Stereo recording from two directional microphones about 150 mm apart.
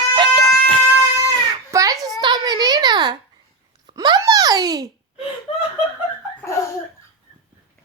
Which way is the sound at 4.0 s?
25° right (ahead or behind).